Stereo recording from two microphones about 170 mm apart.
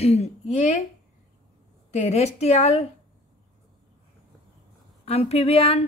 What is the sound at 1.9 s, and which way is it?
Speech, 40° left (ahead or behind).